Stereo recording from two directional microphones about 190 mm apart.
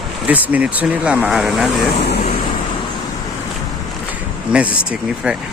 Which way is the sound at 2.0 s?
60° left (ahead or behind).